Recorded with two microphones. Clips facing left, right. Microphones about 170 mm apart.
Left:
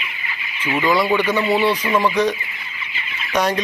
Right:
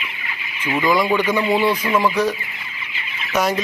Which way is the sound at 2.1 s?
5° right (ahead or behind).